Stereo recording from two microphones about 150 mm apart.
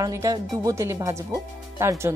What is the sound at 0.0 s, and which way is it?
Speech, 20° right (ahead or behind).